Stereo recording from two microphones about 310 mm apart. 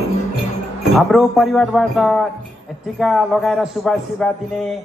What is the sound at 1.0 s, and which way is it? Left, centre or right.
A man's voice, centre.